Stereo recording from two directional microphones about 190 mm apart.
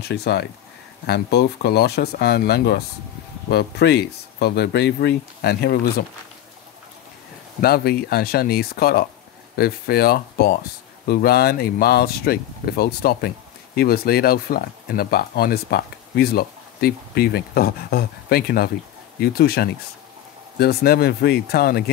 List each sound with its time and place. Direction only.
0.0 s speech: 60° left (ahead or behind)
7.6 s speech: 55° left (ahead or behind)